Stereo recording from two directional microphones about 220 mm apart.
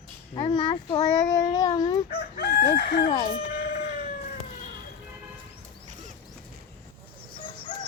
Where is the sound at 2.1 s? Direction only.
45° left (ahead or behind).